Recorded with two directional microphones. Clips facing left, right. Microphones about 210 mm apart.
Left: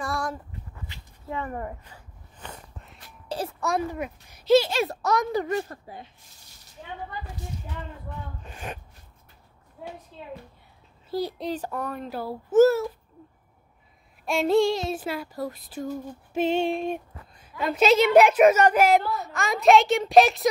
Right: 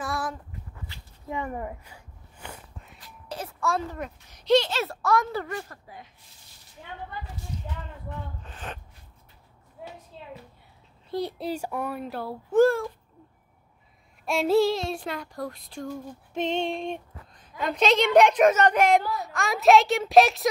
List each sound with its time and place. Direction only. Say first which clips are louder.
0.0 s dog: left 1 dB; centre (ahead or behind)
1.3 s a sound: even; 10° right (ahead or behind)
3.3 s a sound: left 5 dB; 30° left (ahead or behind)
3.6 s a child's voice: even; 15° left (ahead or behind); by 6.0 s 30° left (ahead or behind)
8.5 s a child's voice: left 2 dB; 10° left (ahead or behind)
11.1 s a child's voice: left 1 dB; centre (ahead or behind)
14.2 s a child's voice: left 1 dB; centre (ahead or behind)